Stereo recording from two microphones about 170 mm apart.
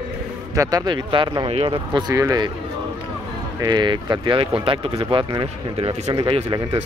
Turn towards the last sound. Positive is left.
turn(degrees=-30)  # may be behind; listen again after turning